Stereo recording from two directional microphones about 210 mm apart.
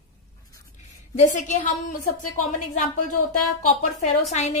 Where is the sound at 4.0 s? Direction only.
30° left (ahead or behind).